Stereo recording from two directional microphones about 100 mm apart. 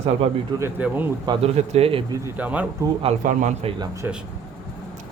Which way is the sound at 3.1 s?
90° right.